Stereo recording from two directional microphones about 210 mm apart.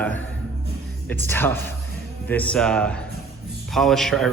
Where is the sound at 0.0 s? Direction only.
5° left (ahead or behind).